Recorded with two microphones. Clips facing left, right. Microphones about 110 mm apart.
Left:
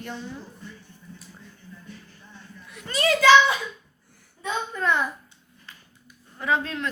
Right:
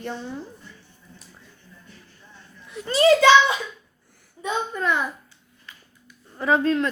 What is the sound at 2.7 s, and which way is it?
Speech, 30° right (ahead or behind).